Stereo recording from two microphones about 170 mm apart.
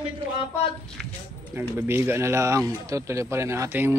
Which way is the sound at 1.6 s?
15° right (ahead or behind).